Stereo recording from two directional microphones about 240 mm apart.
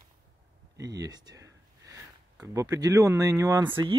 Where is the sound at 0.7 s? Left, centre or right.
Centre.